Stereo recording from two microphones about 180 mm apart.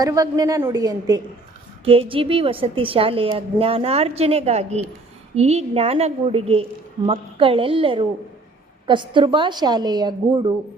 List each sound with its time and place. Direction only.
0.0 s a woman's voice: 20° right (ahead or behind)
1.8 s a woman's voice: 30° right (ahead or behind)